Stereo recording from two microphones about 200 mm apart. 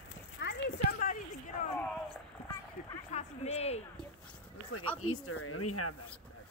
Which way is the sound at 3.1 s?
30° left (ahead or behind).